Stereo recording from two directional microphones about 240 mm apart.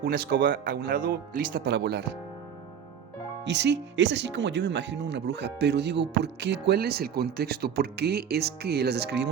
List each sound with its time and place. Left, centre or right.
0.0 s speech: right
3.4 s speech: right